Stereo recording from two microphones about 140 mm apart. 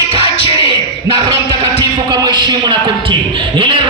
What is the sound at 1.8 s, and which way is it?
Music, 30° right (ahead or behind).